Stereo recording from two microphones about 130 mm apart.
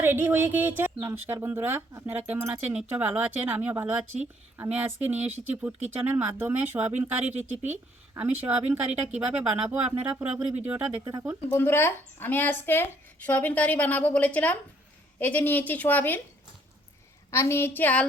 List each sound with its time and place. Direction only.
0.0 s speech: 15° right (ahead or behind)
11.0 s speech: 25° right (ahead or behind)
11.3 s speech: 15° left (ahead or behind)
17.3 s a woman's voice: 20° left (ahead or behind)